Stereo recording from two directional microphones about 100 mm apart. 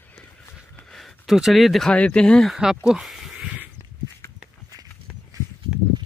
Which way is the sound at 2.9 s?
5° right (ahead or behind).